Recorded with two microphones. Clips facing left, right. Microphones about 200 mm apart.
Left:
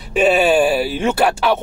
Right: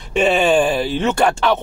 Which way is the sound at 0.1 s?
5° left (ahead or behind).